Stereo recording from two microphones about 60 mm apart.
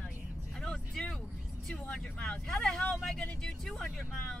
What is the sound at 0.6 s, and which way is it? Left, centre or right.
Music, centre.